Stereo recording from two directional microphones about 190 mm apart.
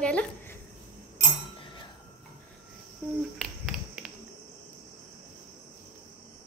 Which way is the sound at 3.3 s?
Centre (ahead or behind).